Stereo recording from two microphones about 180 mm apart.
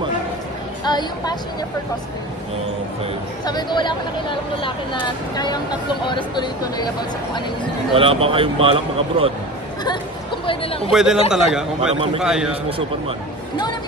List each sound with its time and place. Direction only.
0.8 s speech: 25° left (ahead or behind)
3.4 s speech: 25° left (ahead or behind)
7.9 s speech: 30° right (ahead or behind)
9.8 s chatter: 30° left (ahead or behind)
10.9 s a man's voice: 5° right (ahead or behind)